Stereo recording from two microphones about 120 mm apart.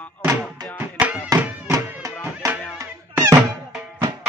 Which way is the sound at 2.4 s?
30° right (ahead or behind).